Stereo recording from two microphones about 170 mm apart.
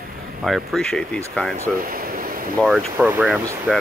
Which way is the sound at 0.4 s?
Centre (ahead or behind).